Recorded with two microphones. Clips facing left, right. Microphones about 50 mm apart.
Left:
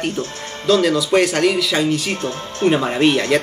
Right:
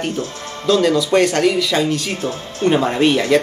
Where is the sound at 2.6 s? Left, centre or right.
Centre.